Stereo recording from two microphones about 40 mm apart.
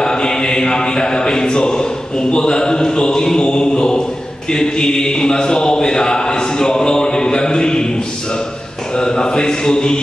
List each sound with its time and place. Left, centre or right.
0.0 s chant: centre
4.5 s a man's voice: centre
8.9 s a man's voice: left